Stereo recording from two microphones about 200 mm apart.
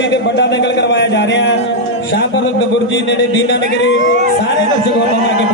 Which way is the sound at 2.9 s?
65° left (ahead or behind).